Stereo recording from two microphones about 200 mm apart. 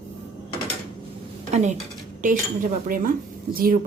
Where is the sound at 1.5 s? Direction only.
35° right (ahead or behind).